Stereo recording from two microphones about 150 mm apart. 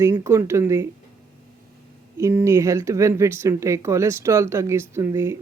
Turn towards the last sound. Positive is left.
turn(degrees=-20)  # may be behind; listen again after turning